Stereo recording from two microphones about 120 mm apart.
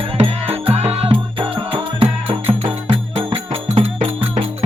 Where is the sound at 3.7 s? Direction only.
60° right (ahead or behind).